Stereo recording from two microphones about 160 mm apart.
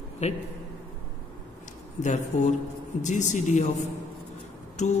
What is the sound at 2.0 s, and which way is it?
Speech, 50° left (ahead or behind).